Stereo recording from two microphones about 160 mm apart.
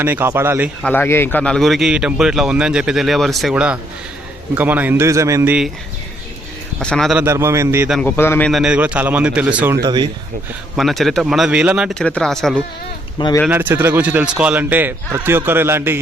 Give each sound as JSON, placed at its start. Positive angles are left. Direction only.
{"t": 0.0, "sound": "a man's voice", "side_deg": -15}
{"t": 0.8, "sound": "a man's voice", "side_deg": 10}
{"t": 6.7, "sound": "speech", "side_deg": 5}
{"t": 7.2, "sound": "a man's voice", "side_deg": -15}
{"t": 8.0, "sound": "a man's voice", "side_deg": 15}
{"t": 8.4, "sound": "a man's voice", "side_deg": -5}
{"t": 9.8, "sound": "speech", "side_deg": -25}
{"t": 10.8, "sound": "speech", "side_deg": 0}
{"t": 11.9, "sound": "speech", "side_deg": 5}
{"t": 13.1, "sound": "speech", "side_deg": 25}
{"t": 13.5, "sound": "a man's voice", "side_deg": -10}